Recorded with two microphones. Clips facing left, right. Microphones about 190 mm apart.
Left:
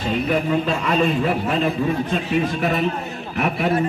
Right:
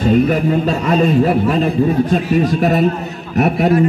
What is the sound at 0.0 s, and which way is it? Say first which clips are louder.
A man's voice: right 8 dB; 45° right (ahead or behind).